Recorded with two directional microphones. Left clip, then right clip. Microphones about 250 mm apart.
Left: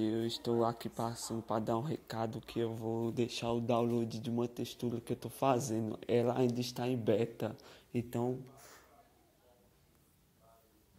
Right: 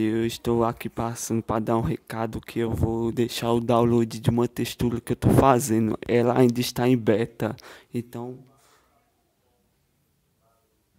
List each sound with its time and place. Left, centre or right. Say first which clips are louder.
0.0 s speech: right 10 dB; right
8.1 s speech: right 1 dB; centre
8.5 s a sound: left 2 dB; centre